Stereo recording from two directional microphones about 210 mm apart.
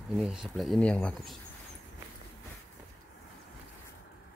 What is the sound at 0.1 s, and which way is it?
Speech, centre (ahead or behind).